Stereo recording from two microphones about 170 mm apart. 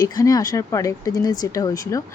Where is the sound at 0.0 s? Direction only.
20° left (ahead or behind).